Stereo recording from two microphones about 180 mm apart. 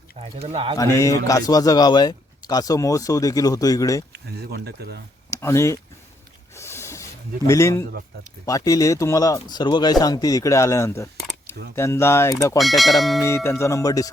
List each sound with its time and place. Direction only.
0.2 s speech: 35° right (ahead or behind)
0.8 s a man's voice: 20° left (ahead or behind)
4.1 s speech: 65° right (ahead or behind)
5.3 s speech: 15° left (ahead or behind)
6.5 s a sound: 15° left (ahead or behind)
8.4 s a man's voice: 20° left (ahead or behind)
12.5 s speech: centre (ahead or behind)
13.2 s speech: 15° left (ahead or behind)